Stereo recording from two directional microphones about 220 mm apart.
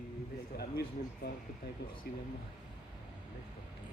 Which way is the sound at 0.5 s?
45° left (ahead or behind).